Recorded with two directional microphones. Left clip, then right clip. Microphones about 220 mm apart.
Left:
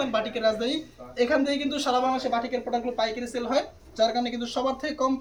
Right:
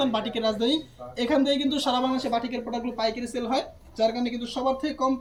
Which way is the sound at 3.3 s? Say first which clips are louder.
Left 1 dB; 30° left (ahead or behind).